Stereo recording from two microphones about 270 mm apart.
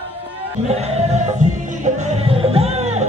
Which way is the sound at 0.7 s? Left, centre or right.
Right.